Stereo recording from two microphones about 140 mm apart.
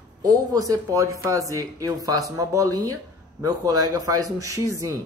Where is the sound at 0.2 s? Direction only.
25° right (ahead or behind).